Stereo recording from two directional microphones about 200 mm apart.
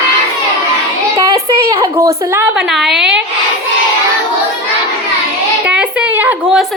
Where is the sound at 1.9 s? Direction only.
15° right (ahead or behind).